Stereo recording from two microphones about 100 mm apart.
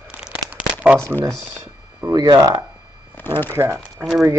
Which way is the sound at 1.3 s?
10° left (ahead or behind).